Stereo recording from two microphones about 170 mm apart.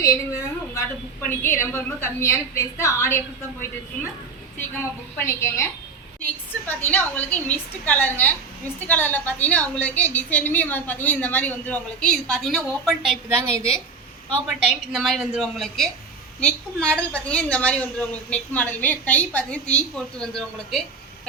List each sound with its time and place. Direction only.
0.0 s a sound: 20° left (ahead or behind)
1.2 s a woman's voice: 10° left (ahead or behind)
5.1 s a woman's voice: 15° left (ahead or behind)
6.7 s a woman's voice: 10° left (ahead or behind)
13.3 s a woman's voice: 15° right (ahead or behind); by 20.8 s 5° left (ahead or behind)